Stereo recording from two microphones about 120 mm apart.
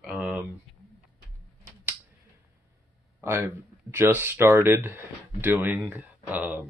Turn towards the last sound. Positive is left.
turn(degrees=-15)  # may be behind; listen again after turning